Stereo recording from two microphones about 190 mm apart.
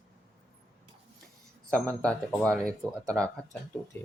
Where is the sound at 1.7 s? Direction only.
5° left (ahead or behind).